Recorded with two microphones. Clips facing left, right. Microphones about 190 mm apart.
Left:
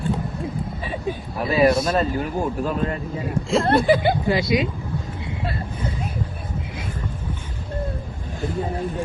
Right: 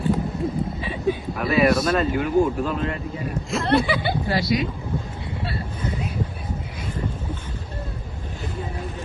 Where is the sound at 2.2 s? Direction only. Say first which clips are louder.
Right 4 dB; 40° left (ahead or behind).